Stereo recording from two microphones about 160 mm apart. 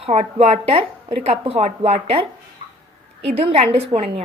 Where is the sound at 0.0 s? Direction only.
40° right (ahead or behind).